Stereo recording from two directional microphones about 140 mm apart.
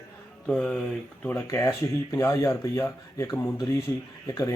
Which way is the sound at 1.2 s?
15° left (ahead or behind).